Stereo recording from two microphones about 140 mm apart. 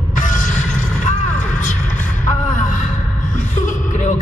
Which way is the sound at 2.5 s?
65° left (ahead or behind).